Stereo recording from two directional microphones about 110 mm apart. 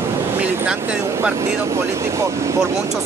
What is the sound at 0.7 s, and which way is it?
Speech, 15° right (ahead or behind).